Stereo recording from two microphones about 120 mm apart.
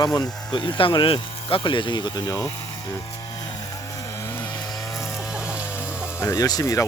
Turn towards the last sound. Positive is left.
turn(degrees=30)  # may be behind; listen again after turning